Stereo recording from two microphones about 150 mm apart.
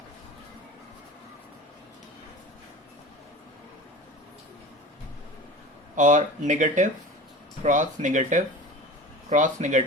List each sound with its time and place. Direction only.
6.0 s speech: 60° right (ahead or behind)